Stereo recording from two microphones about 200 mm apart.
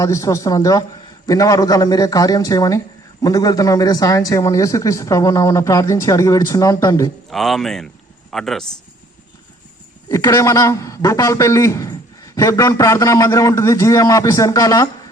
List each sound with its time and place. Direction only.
0.0 s a man's voice: 15° left (ahead or behind)
7.3 s speech: centre (ahead or behind)
10.1 s a man's voice: 15° left (ahead or behind)